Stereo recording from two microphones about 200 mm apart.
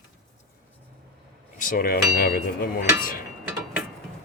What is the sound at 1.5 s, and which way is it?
Speech, 45° left (ahead or behind).